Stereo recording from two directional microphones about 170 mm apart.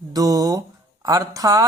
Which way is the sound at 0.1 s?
20° right (ahead or behind).